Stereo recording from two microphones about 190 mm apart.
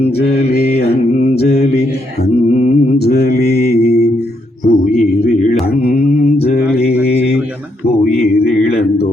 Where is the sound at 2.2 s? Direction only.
40° left (ahead or behind).